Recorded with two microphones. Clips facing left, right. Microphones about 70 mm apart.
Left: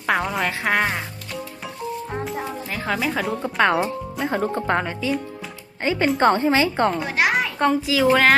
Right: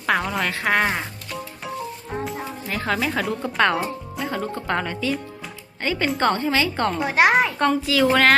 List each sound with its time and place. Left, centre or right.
0.0 s speech: centre
2.2 s speech: centre
4.3 s speech: left
7.2 s a sound: right
7.6 s speech: centre